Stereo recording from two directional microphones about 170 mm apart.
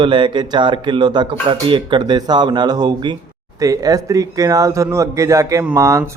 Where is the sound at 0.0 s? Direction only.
30° right (ahead or behind).